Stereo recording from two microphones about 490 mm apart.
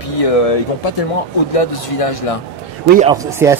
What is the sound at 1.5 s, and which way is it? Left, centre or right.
Speech, left.